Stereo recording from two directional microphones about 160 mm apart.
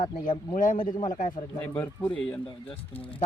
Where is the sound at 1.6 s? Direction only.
10° left (ahead or behind).